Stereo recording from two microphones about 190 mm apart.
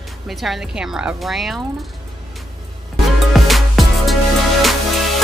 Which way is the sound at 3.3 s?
Centre (ahead or behind).